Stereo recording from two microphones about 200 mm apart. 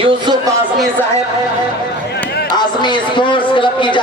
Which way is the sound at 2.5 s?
20° left (ahead or behind).